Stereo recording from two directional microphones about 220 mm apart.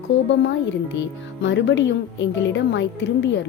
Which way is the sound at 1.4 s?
55° left (ahead or behind).